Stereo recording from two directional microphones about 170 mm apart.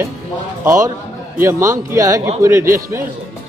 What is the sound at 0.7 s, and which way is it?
A man's voice, 20° right (ahead or behind).